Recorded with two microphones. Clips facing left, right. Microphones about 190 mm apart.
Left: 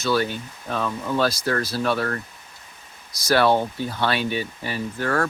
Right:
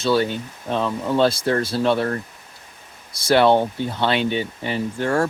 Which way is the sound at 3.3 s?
20° right (ahead or behind).